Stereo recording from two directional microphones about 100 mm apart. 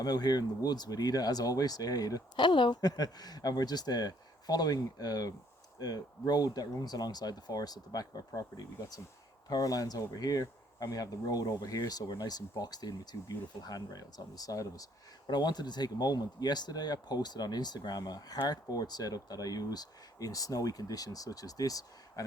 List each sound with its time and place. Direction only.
0.0 s speech: 40° left (ahead or behind)
2.4 s speech: 50° left (ahead or behind); by 22.2 s 35° left (ahead or behind)